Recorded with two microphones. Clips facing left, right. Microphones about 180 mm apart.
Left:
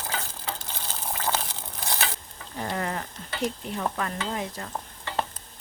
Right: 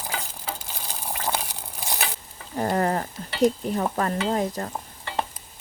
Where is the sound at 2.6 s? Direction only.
40° right (ahead or behind).